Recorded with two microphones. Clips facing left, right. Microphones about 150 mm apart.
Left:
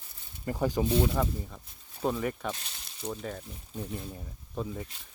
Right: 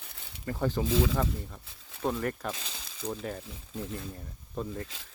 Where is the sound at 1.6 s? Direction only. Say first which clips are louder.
Right 3 dB; 90° right.